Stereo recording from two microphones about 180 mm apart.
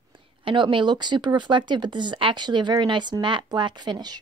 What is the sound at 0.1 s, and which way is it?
A woman's voice, 25° right (ahead or behind).